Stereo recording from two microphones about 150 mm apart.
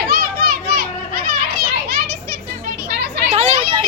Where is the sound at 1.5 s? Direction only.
90° right.